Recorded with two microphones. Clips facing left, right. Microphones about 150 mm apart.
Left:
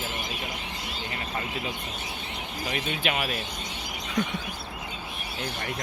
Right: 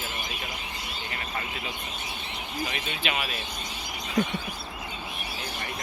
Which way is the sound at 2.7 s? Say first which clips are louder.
Left 3 dB; 45° left (ahead or behind).